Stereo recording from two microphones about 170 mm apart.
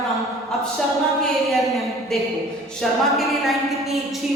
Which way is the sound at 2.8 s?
Centre (ahead or behind).